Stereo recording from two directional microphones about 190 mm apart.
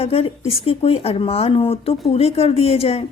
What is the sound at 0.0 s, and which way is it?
Speech, 30° left (ahead or behind).